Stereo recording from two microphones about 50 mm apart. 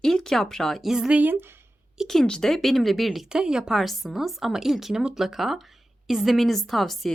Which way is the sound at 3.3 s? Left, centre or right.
Centre.